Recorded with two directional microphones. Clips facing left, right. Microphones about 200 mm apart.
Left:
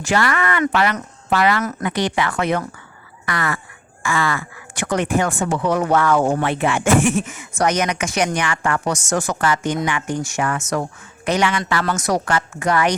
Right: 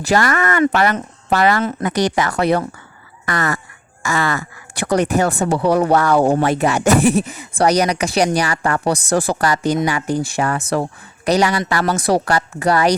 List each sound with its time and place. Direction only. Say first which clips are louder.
0.0 s speech: right 3 dB; 40° right (ahead or behind)